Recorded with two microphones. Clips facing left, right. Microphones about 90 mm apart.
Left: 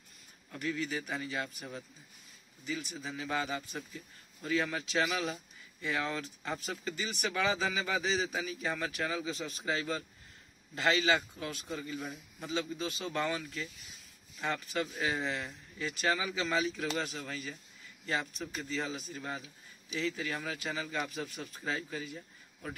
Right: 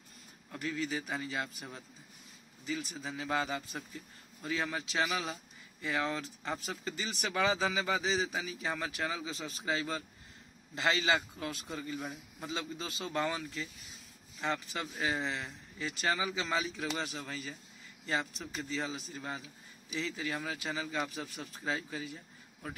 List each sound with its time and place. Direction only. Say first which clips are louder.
0.5 s speech: even; 30° right (ahead or behind)
2.6 s speech: right 1 dB; 35° right (ahead or behind)
12.0 s a man's voice: even; 10° right (ahead or behind)
12.4 s speech: left 4 dB; 30° right (ahead or behind)